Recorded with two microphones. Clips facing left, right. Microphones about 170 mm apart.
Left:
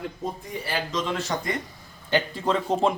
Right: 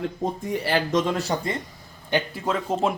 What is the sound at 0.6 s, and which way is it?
Speech, 60° right (ahead or behind).